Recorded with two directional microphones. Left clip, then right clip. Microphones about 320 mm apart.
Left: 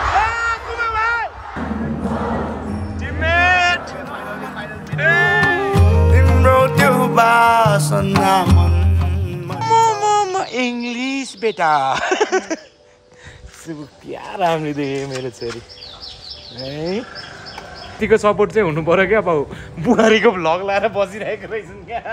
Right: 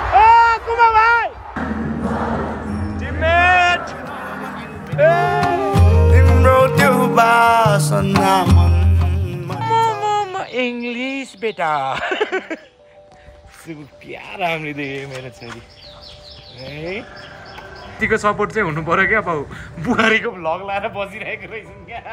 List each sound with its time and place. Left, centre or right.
0.2 s a sound: centre
1.6 s music: centre
4.9 s music: centre
5.2 s music: centre
14.0 s speech: centre
16.7 s sheep: left
18.0 s a man's voice: centre
20.3 s a man's voice: left
21.1 s speech: left